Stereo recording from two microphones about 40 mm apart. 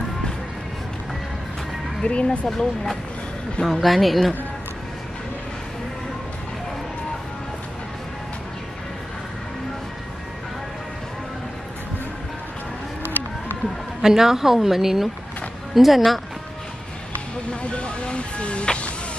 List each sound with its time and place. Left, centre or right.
2.0 s speech: left
2.5 s speech: centre
13.0 s a sound: left
14.0 s a woman's voice: centre
17.5 s speech: left